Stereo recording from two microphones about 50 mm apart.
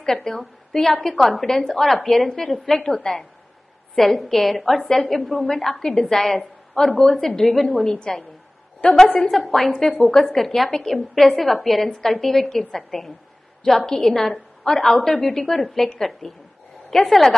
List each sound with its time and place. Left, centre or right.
0.0 s a woman's voice: centre
4.8 s a woman's voice: centre
7.9 s a woman's voice: centre
8.8 s a woman's voice: left
9.3 s a woman's voice: centre